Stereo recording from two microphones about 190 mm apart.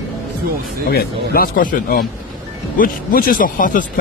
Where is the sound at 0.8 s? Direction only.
55° left (ahead or behind).